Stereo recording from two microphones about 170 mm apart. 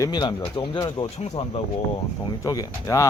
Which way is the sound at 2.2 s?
20° left (ahead or behind).